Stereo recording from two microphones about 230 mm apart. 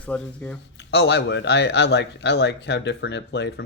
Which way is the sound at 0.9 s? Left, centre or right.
Left.